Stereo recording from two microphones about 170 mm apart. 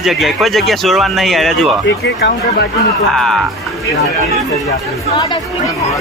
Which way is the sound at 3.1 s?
Centre (ahead or behind).